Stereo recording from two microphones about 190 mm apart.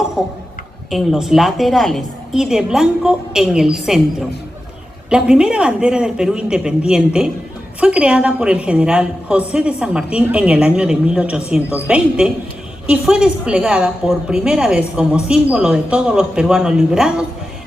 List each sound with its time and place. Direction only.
0.2 s a woman's voice: centre (ahead or behind)
5.0 s a woman's voice: 5° right (ahead or behind)